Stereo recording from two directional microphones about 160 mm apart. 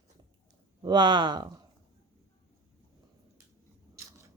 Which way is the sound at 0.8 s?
30° right (ahead or behind).